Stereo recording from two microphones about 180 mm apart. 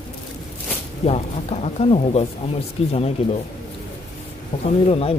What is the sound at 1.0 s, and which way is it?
Speech, 35° left (ahead or behind).